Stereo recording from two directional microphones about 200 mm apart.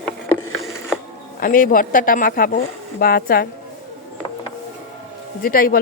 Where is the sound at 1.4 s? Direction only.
45° left (ahead or behind).